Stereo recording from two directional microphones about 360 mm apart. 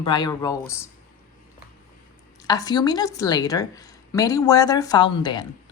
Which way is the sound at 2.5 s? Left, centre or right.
Centre.